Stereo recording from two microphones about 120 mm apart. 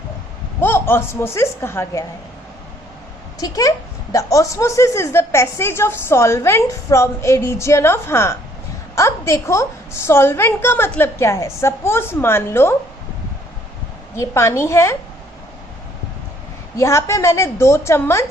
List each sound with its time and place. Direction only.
0.6 s speech: 20° left (ahead or behind)
3.4 s speech: 25° left (ahead or behind)
14.2 s speech: 25° left (ahead or behind)
16.7 s speech: 25° left (ahead or behind)